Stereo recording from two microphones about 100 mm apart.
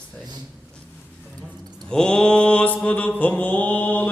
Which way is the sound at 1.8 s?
10° left (ahead or behind).